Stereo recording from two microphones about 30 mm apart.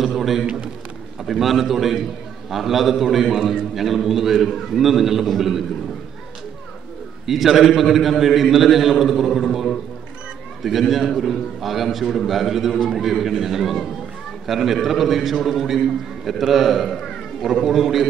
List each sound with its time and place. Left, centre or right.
0.0 s a man's voice: centre
7.2 s a man's voice: centre